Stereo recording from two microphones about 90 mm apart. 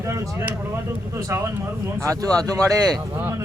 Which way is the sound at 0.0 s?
35° right (ahead or behind).